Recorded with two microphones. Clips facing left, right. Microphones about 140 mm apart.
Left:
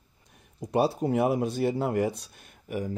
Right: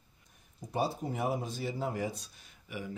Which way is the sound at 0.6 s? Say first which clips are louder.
Left 8 dB; 75° left (ahead or behind).